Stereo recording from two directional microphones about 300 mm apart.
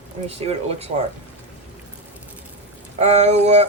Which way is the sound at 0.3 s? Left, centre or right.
Centre.